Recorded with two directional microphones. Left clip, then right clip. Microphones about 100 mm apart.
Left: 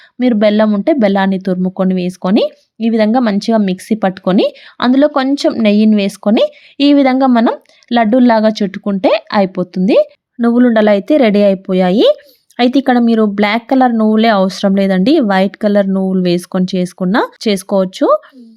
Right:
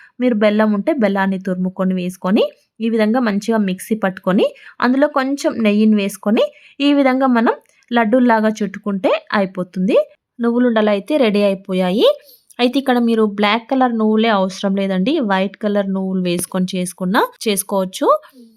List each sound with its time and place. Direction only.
0.2 s speech: 15° left (ahead or behind)
10.4 s speech: 35° left (ahead or behind)